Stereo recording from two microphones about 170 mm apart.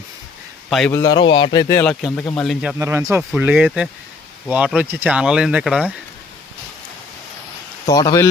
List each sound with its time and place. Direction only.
0.9 s a man's voice: 20° left (ahead or behind)
1.8 s speech: 5° left (ahead or behind)
2.7 s speech: 15° right (ahead or behind)
3.2 s speech: 5° right (ahead or behind)
7.9 s a man's voice: 20° left (ahead or behind)